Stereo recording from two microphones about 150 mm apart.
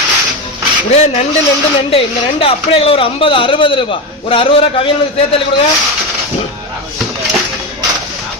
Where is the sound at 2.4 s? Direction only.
40° left (ahead or behind).